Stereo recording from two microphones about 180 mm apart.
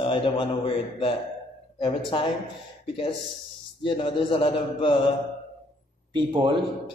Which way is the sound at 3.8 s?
30° left (ahead or behind).